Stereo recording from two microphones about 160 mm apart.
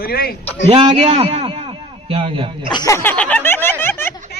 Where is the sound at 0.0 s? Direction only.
70° left (ahead or behind).